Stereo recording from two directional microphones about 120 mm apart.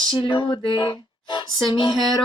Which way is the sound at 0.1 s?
40° left (ahead or behind).